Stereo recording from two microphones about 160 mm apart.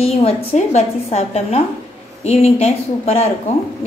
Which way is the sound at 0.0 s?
40° left (ahead or behind).